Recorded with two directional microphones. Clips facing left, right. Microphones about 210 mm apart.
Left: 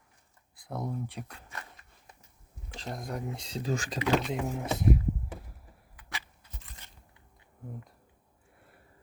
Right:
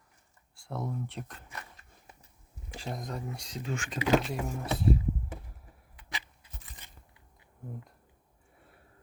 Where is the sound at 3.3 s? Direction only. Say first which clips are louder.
Left 4 dB; 25° left (ahead or behind).